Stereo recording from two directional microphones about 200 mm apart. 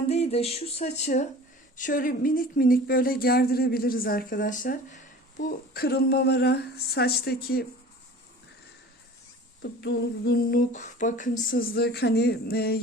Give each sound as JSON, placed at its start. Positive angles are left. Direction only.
{"t": 0.1, "sound": "a sound", "side_deg": 30}
{"t": 1.7, "sound": "speech", "side_deg": 40}
{"t": 9.6, "sound": "speech", "side_deg": 55}